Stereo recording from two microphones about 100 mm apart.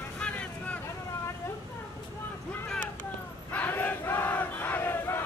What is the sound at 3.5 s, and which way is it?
Battle cry, 20° left (ahead or behind).